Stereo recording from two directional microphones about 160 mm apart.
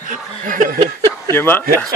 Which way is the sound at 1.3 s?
15° left (ahead or behind).